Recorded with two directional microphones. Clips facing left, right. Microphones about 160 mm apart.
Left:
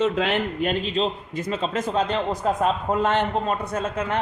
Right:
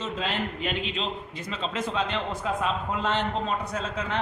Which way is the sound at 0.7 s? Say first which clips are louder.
Left 7 dB; 40° left (ahead or behind).